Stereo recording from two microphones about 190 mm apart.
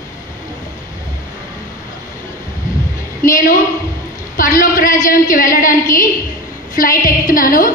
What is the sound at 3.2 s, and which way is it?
A woman's voice, 45° left (ahead or behind).